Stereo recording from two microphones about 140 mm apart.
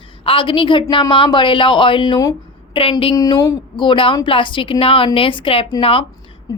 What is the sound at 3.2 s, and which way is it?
A woman's voice, 30° left (ahead or behind).